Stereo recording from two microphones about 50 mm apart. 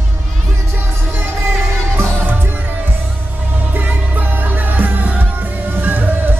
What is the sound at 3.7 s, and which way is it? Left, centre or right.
Music, right.